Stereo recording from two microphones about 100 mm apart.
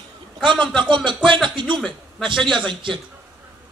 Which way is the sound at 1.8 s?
Centre (ahead or behind).